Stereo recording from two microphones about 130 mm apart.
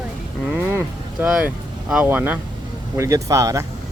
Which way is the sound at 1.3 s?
5° right (ahead or behind).